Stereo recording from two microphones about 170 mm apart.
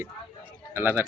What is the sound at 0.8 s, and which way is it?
Speech, 10° right (ahead or behind).